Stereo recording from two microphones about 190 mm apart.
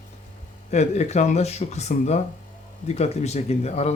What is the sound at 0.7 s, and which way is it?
Speech, 35° left (ahead or behind).